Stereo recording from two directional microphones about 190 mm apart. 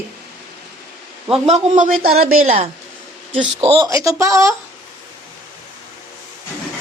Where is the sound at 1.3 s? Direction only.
40° right (ahead or behind).